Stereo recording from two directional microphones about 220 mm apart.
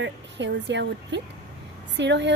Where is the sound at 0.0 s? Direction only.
55° right (ahead or behind).